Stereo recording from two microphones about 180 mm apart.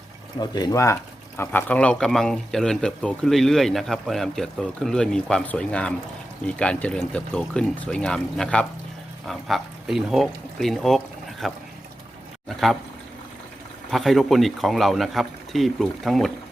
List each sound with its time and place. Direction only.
0.3 s speech: 20° left (ahead or behind); by 12.7 s centre (ahead or behind)
13.9 s speech: centre (ahead or behind)